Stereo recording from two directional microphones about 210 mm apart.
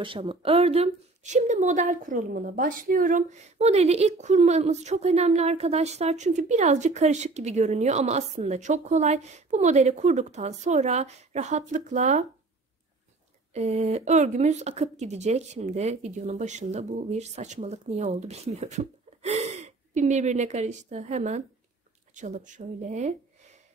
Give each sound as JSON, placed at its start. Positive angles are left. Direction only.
{"t": 0.0, "sound": "speech", "side_deg": -25}
{"t": 13.5, "sound": "speech", "side_deg": -30}